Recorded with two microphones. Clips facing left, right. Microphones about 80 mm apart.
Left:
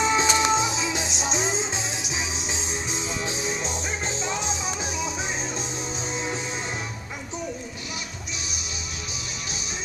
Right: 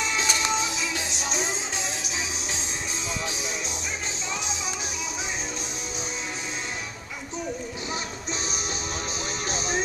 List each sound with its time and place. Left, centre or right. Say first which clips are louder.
0.0 s music: left 6 dB; left